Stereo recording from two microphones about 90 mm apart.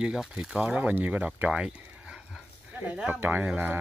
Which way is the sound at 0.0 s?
5° right (ahead or behind).